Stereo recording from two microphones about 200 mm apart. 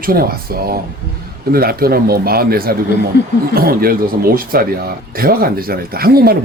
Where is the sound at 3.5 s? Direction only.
50° right (ahead or behind).